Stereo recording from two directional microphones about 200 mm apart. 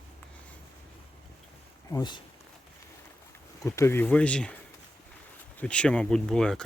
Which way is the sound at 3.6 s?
15° left (ahead or behind).